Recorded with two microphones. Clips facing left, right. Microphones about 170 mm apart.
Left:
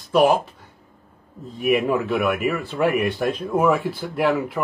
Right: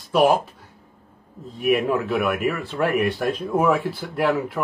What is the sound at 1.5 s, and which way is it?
Speech, centre (ahead or behind).